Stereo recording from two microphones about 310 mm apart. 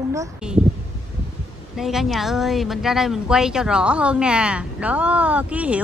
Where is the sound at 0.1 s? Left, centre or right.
Centre.